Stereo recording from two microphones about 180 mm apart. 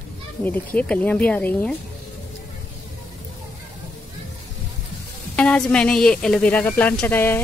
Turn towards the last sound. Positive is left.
turn(degrees=10)  # may be behind; listen again after turning